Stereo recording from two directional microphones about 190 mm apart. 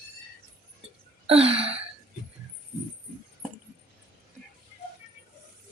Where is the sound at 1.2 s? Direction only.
30° right (ahead or behind).